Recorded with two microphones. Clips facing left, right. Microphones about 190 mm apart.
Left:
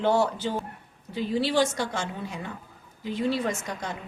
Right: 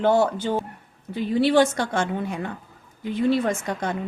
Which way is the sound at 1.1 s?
55° right (ahead or behind).